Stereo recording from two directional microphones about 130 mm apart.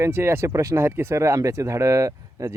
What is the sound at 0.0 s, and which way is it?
Speech, 20° right (ahead or behind).